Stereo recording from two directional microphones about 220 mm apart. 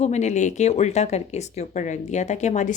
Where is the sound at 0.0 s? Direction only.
30° left (ahead or behind).